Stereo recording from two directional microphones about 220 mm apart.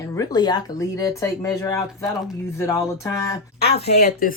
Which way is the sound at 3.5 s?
45° left (ahead or behind).